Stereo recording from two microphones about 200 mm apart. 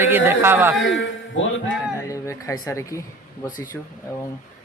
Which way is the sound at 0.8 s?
70° left (ahead or behind).